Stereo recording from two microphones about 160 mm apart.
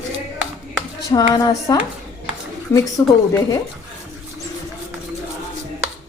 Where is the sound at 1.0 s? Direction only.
20° left (ahead or behind).